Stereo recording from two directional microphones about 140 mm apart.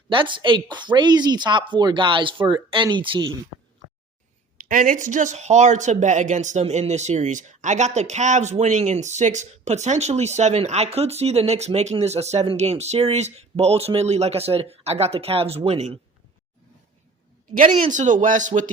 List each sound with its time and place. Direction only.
0.1 s speech: 35° right (ahead or behind)
4.7 s speech: 75° right (ahead or behind); by 16.0 s 45° right (ahead or behind)
17.7 s speech: 65° right (ahead or behind)